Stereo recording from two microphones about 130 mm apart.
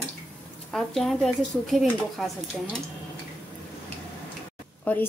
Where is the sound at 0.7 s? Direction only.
5° left (ahead or behind).